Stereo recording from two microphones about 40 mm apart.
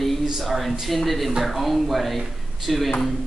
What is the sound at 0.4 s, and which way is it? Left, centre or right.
Speech, centre.